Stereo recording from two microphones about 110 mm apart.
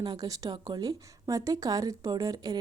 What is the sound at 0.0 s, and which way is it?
A woman's voice, 35° right (ahead or behind).